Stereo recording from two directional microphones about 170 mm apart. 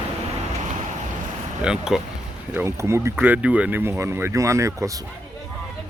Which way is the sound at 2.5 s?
15° right (ahead or behind).